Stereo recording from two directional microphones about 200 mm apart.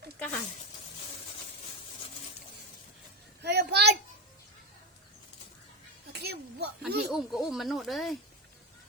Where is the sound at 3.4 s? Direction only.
55° right (ahead or behind).